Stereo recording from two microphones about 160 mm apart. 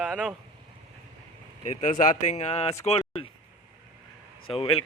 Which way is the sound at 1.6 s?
50° left (ahead or behind).